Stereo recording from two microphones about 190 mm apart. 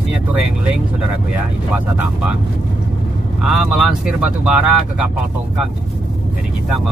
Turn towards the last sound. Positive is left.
turn(degrees=-5)  # may be behind; listen again after turning